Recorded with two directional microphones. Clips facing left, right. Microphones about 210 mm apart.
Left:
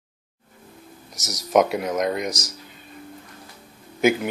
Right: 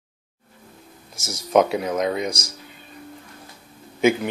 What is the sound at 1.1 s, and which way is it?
Speech, 20° left (ahead or behind).